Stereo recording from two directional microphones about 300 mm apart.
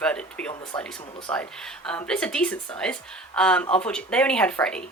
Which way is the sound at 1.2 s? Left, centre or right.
Centre.